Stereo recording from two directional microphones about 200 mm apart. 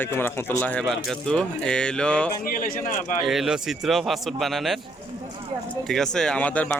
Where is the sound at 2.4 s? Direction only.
45° left (ahead or behind).